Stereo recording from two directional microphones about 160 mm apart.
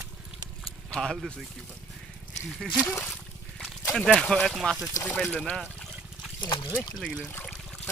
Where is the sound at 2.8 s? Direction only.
15° left (ahead or behind).